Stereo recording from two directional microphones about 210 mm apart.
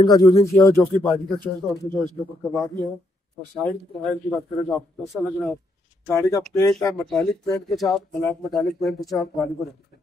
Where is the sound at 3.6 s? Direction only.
5° left (ahead or behind).